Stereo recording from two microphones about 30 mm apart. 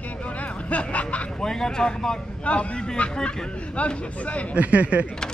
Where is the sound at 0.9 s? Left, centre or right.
Left.